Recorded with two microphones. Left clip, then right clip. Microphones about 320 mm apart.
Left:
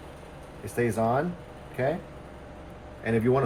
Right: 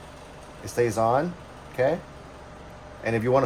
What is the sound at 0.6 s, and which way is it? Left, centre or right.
Speech, centre.